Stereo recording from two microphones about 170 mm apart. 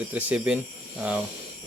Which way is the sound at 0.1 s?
10° right (ahead or behind).